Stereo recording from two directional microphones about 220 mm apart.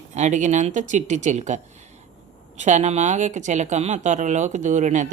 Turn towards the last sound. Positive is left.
turn(degrees=-35)  # may be behind; listen again after turning